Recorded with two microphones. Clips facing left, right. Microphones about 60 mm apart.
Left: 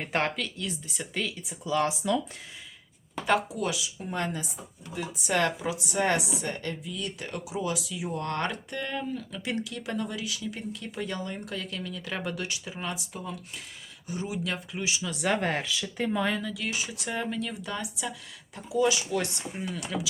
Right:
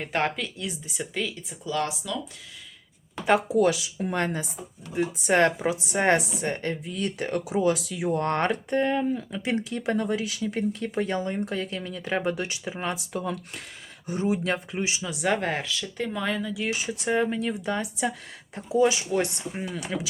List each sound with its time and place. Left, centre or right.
0.0 s speech: centre
1.1 s speech: centre
2.0 s speech: left
3.5 s speech: right
4.9 s speech: right
13.1 s speech: right
14.1 s speech: right
15.1 s speech: centre
16.8 s speech: right